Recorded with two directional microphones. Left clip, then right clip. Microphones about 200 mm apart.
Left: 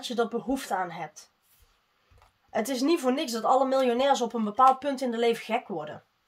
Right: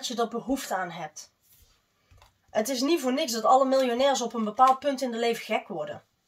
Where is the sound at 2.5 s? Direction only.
45° left (ahead or behind).